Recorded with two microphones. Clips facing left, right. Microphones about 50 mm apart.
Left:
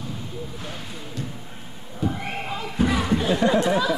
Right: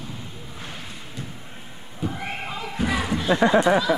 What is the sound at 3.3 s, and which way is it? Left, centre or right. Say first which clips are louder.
Speech: right 4 dB; right.